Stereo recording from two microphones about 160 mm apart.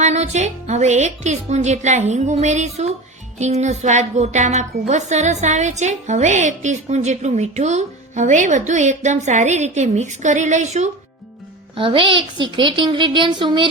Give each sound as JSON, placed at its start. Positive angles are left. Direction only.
{"t": 0.0, "sound": "a woman's voice", "side_deg": -45}
{"t": 11.8, "sound": "speech", "side_deg": -30}